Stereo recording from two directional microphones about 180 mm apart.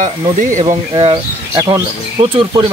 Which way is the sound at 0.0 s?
45° right (ahead or behind).